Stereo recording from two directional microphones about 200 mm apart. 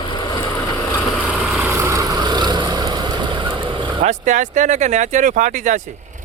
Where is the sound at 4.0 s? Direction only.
40° right (ahead or behind).